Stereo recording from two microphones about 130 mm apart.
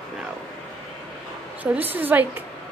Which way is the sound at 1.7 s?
15° right (ahead or behind).